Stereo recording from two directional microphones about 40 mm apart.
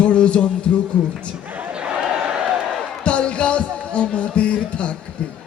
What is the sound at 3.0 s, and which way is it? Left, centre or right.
Music, left.